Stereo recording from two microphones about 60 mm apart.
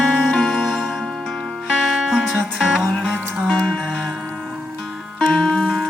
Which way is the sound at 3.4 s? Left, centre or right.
Centre.